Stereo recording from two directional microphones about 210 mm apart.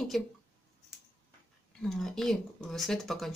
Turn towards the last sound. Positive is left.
turn(degrees=0)  # may be behind; listen again after turning